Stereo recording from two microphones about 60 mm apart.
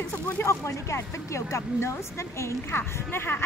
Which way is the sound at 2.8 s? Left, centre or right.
Left.